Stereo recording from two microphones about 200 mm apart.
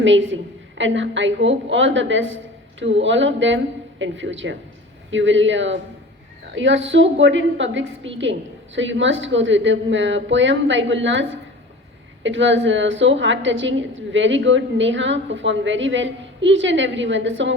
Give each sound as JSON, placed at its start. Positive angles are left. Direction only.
{"t": 0.0, "sound": "a woman's voice", "side_deg": -70}